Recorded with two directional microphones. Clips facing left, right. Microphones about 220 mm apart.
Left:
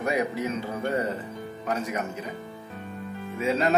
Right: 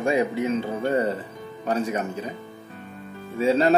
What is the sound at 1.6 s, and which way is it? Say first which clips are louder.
Speech: right 5 dB; 30° right (ahead or behind).